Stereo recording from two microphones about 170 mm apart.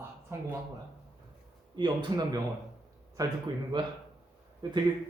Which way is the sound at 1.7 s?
25° right (ahead or behind).